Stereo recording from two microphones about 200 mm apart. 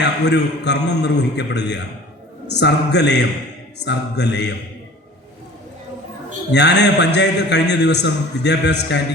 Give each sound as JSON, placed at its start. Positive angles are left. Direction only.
{"t": 0.0, "sound": "a man's voice", "side_deg": 60}
{"t": 6.5, "sound": "a man's voice", "side_deg": 60}